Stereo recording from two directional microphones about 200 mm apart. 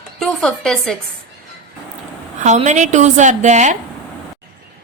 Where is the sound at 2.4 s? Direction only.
35° right (ahead or behind).